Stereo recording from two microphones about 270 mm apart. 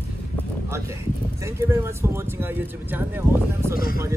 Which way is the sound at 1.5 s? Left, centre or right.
Centre.